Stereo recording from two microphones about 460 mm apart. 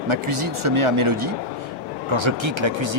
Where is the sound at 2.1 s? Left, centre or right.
Right.